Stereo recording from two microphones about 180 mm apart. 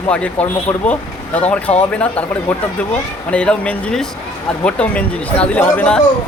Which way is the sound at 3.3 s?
5° left (ahead or behind).